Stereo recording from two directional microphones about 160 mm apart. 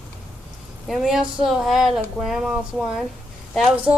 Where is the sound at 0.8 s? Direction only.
Centre (ahead or behind).